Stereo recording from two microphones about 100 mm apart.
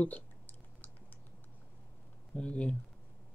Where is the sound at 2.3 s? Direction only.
10° left (ahead or behind).